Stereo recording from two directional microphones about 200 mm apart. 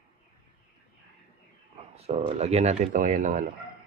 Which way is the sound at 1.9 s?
30° right (ahead or behind).